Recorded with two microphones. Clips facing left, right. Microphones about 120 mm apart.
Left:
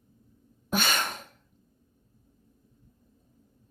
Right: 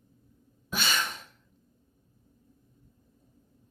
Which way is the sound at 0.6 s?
50° left (ahead or behind).